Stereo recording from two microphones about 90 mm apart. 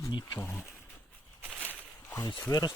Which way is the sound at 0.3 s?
20° left (ahead or behind).